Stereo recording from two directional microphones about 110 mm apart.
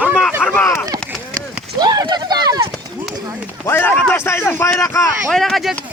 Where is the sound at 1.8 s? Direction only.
35° right (ahead or behind).